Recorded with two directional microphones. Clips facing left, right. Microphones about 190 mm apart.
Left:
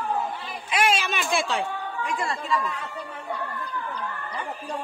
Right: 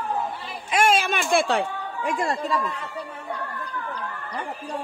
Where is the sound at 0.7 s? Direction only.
50° right (ahead or behind).